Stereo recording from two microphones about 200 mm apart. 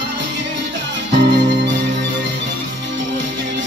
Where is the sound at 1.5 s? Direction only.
60° right (ahead or behind).